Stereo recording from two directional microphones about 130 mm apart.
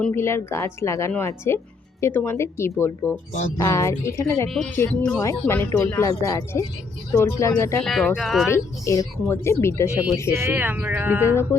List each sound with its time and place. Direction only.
0.0 s speech: 20° left (ahead or behind)
4.4 s speech: centre (ahead or behind)
5.2 s speech: 20° left (ahead or behind)
7.9 s speech: centre (ahead or behind)
8.4 s speech: 20° left (ahead or behind)
10.3 s speech: 15° right (ahead or behind)